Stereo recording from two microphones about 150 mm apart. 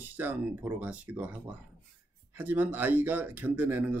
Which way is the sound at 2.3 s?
10° right (ahead or behind).